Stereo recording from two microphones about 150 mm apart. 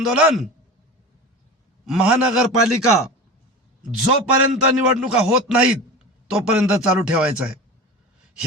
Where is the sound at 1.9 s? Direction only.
5° right (ahead or behind).